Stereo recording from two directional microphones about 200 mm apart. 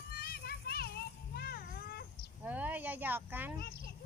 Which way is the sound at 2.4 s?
10° right (ahead or behind).